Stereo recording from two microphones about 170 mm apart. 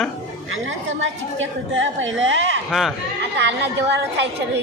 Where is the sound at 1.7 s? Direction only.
90° right.